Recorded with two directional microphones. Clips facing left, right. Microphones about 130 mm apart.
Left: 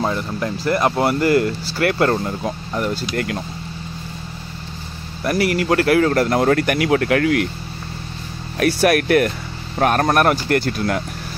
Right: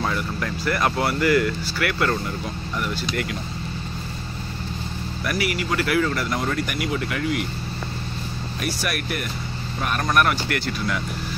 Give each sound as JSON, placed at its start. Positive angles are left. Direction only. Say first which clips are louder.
{"t": 0.0, "sound": "speech", "louder": "left 4 dB", "side_deg": 25}
{"t": 5.2, "sound": "speech", "louder": "left 7 dB", "side_deg": 30}
{"t": 5.5, "sound": "speech", "louder": "left 8 dB", "side_deg": 55}
{"t": 8.5, "sound": "speech", "louder": "left 13 dB", "side_deg": 60}
{"t": 9.8, "sound": "speech", "louder": "left 6 dB", "side_deg": 55}